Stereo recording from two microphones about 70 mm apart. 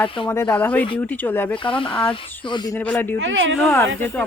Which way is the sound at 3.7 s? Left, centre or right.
Left.